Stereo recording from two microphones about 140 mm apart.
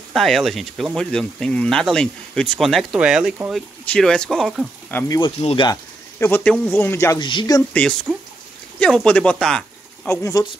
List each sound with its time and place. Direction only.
0.1 s speech: centre (ahead or behind)
3.9 s speech: 5° left (ahead or behind)
4.9 s speech: 25° left (ahead or behind)
5.2 s speech: 40° left (ahead or behind)
5.7 s speech: 15° left (ahead or behind)
7.2 s speech: 35° left (ahead or behind)
7.7 s speech: 5° left (ahead or behind)
10.1 s speech: 20° left (ahead or behind)